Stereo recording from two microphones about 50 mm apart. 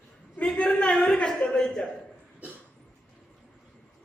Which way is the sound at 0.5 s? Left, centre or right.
Centre.